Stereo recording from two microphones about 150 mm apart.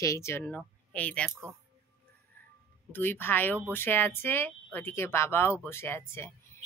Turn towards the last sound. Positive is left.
turn(degrees=15)  # may be behind; listen again after turning